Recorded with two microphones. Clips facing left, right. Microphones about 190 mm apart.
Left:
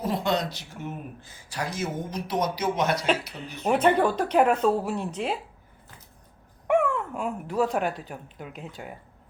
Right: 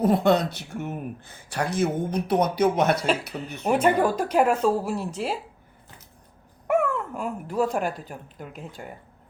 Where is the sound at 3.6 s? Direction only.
10° right (ahead or behind).